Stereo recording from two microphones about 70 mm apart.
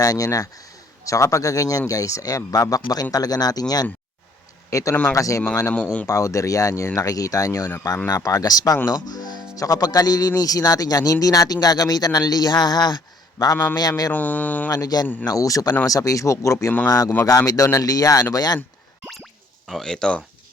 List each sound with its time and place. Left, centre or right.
0.0 s speech: left
4.7 s speech: left
5.7 s speech: centre
6.1 s speech: left
9.6 s speech: left
13.4 s speech: left
14.1 s speech: left
14.7 s speech: left
15.3 s speech: left
19.6 s speech: centre